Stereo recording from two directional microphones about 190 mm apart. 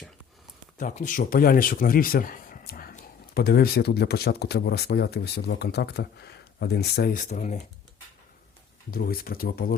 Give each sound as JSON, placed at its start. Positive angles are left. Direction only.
{"t": 0.8, "sound": "speech", "side_deg": 45}
{"t": 7.2, "sound": "speech", "side_deg": 40}
{"t": 8.9, "sound": "speech", "side_deg": 50}